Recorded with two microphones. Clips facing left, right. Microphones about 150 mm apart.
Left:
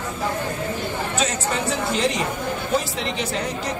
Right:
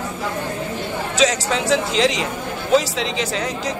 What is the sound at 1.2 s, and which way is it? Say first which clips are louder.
Speech: right 7 dB; 90° right.